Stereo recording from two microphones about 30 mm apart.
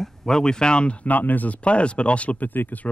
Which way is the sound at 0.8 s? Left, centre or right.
Left.